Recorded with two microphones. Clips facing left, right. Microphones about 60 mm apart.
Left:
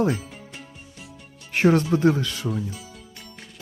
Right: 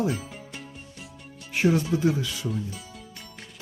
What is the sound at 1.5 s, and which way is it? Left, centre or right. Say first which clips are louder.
Music: left 4 dB; left.